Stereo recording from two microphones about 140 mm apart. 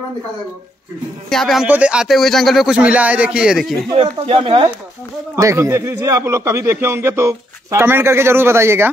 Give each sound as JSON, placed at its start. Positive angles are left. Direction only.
{"t": 1.3, "sound": "speech", "side_deg": 0}
{"t": 3.9, "sound": "speech", "side_deg": -45}
{"t": 5.3, "sound": "speech", "side_deg": -20}